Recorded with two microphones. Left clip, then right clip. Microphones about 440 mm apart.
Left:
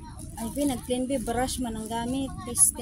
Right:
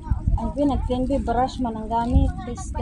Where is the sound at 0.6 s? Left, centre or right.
Left.